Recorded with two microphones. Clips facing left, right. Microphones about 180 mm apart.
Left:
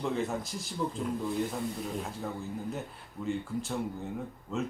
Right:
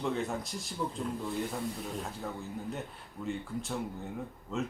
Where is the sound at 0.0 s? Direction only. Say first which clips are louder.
Left 1 dB; centre (ahead or behind).